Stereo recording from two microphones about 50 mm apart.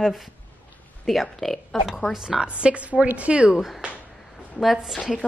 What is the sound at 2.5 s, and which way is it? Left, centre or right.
Speech, right.